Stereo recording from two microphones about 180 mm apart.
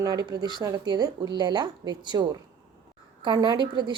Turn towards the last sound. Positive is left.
turn(degrees=-25)  # may be behind; listen again after turning